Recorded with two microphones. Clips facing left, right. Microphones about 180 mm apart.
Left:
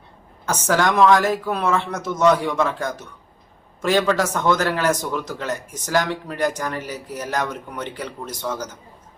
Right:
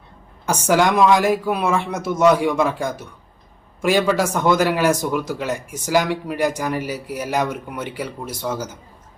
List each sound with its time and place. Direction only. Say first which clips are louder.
0.4 s a man's voice: right 3 dB; 10° right (ahead or behind)